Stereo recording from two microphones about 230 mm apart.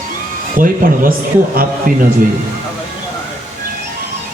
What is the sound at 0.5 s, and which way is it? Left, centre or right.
A man's voice, right.